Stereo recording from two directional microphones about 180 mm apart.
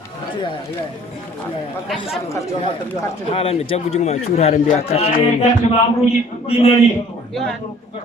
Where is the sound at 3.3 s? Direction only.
30° left (ahead or behind).